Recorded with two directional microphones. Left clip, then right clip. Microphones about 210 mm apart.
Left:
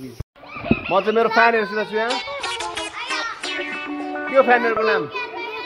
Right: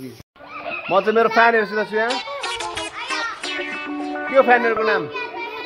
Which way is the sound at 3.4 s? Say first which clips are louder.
Even; centre (ahead or behind).